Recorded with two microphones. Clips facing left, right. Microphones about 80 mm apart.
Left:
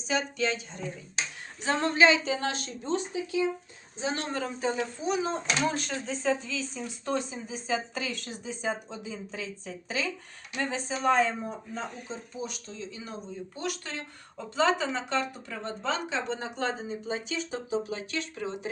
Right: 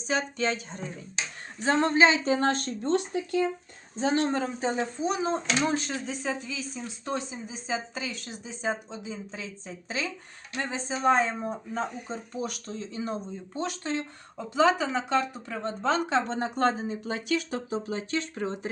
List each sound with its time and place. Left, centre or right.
0.1 s speech: right
1.6 s speech: right
2.9 s speech: right
3.9 s speech: right
12.1 s speech: right
13.6 s speech: right
15.8 s speech: right
17.8 s speech: right